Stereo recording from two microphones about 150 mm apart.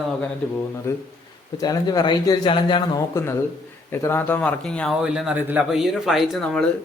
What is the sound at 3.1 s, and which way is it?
Speech, 20° left (ahead or behind).